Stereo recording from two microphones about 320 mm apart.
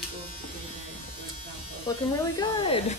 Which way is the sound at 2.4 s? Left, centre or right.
Centre.